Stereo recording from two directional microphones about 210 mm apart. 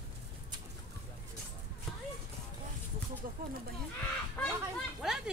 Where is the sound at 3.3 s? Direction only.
40° right (ahead or behind).